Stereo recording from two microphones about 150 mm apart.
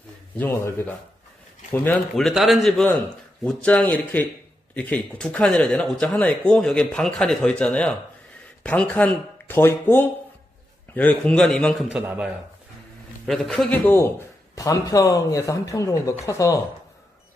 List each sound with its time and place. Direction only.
0.4 s speech: 15° left (ahead or behind)
2.1 s a man's voice: centre (ahead or behind)
11.9 s a man's voice: 10° right (ahead or behind)
13.3 s a man's voice: centre (ahead or behind); by 16.5 s 20° left (ahead or behind)